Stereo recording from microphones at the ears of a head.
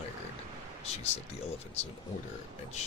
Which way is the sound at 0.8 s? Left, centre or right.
Left.